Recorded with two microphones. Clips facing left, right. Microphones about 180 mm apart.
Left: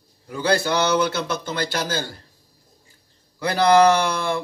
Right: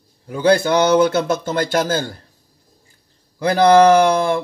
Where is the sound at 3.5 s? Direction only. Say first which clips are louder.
Right 5 dB; 50° right (ahead or behind).